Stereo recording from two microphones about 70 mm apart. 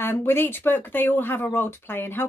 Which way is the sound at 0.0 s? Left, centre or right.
Left.